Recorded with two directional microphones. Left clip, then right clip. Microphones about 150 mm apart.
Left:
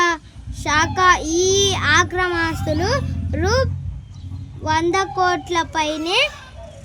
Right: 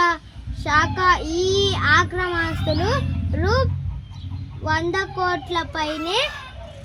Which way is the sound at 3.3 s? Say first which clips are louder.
Left 2 dB; 40° left (ahead or behind).